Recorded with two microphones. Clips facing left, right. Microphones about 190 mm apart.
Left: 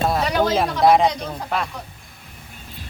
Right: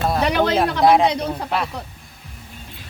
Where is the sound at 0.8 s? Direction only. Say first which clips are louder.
Even; centre (ahead or behind).